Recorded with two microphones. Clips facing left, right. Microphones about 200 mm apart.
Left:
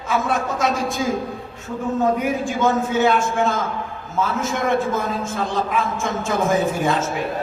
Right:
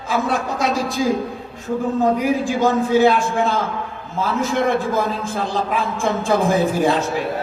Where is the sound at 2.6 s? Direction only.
35° right (ahead or behind).